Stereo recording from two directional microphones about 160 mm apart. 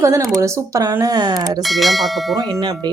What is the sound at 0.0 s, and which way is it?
Speech, 20° right (ahead or behind).